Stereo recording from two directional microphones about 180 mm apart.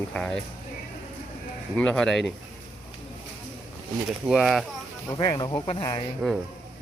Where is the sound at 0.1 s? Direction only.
5° left (ahead or behind).